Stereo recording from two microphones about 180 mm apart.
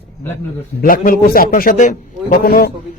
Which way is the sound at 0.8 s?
50° left (ahead or behind).